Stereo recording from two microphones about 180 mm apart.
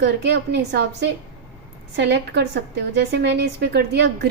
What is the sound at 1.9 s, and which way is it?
A woman's voice, 70° right (ahead or behind).